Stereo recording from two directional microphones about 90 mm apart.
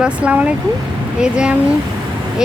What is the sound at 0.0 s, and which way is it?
Speech, 15° right (ahead or behind).